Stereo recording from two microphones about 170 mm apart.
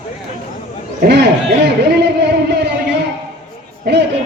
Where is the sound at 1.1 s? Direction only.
85° right.